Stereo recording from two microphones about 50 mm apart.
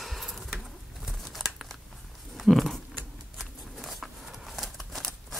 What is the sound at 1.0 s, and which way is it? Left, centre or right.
Scissors, centre.